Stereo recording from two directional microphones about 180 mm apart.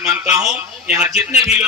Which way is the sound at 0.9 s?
5° right (ahead or behind).